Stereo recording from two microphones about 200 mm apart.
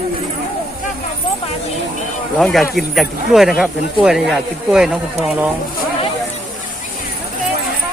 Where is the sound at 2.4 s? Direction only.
5° left (ahead or behind).